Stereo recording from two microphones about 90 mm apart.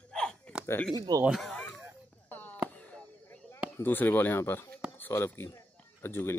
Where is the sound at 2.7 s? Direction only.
15° left (ahead or behind).